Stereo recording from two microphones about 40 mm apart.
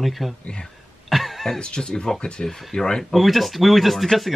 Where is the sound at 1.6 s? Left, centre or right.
Left.